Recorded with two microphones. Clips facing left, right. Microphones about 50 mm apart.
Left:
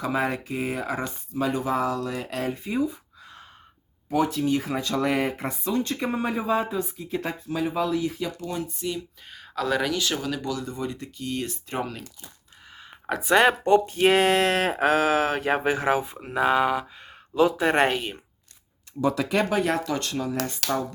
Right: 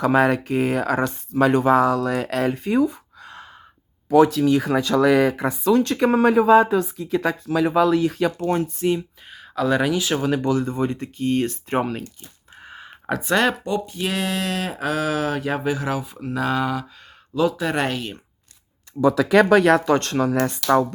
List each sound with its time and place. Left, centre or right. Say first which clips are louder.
0.0 s speech: right 8 dB; right
9.3 s speech: right 5 dB; centre
10.2 s speech: right 8 dB; right
12.6 s a sound: right 7 dB; right
13.1 s speech: left 1 dB; centre
13.7 s speech: left 6 dB; left
16.1 s speech: left 1 dB; left
17.9 s speech: even; centre
19.5 s speech: right 9 dB; right
19.9 s speech: right 8 dB; right